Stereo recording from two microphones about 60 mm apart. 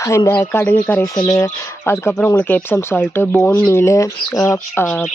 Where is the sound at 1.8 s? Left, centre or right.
Left.